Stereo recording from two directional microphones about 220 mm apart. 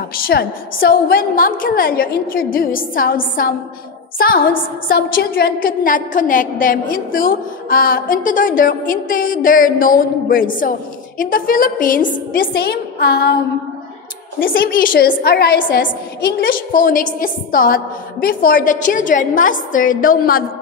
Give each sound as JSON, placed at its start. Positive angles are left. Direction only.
{"t": 0.3, "sound": "a woman's voice", "side_deg": 45}
{"t": 14.4, "sound": "a woman's voice", "side_deg": 40}